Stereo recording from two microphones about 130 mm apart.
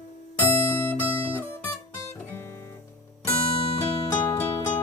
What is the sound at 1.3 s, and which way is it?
Music, 15° left (ahead or behind).